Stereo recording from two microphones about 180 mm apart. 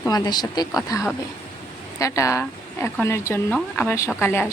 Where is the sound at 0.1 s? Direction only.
20° left (ahead or behind).